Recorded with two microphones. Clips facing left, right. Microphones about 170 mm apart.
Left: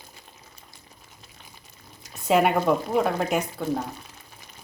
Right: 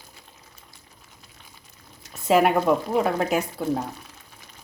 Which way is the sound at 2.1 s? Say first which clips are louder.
Right 2 dB; centre (ahead or behind).